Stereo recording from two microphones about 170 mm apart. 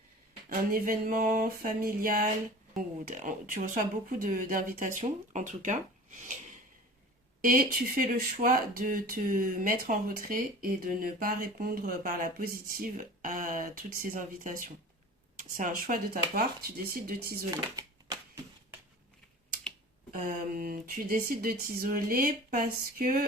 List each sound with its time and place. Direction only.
0.7 s speech: 55° right (ahead or behind)
7.4 s speech: 55° right (ahead or behind)
17.5 s a sound: 25° right (ahead or behind)
20.1 s speech: 60° right (ahead or behind)